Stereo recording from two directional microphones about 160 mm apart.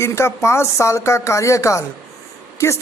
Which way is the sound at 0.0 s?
15° left (ahead or behind).